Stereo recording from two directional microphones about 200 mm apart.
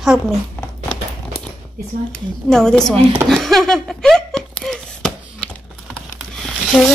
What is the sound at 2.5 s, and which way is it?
Speech, 5° left (ahead or behind).